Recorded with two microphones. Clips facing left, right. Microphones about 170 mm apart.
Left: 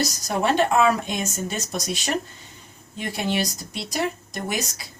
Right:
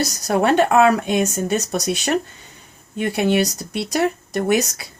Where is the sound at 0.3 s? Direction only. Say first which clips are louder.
Right 5 dB; 60° right (ahead or behind).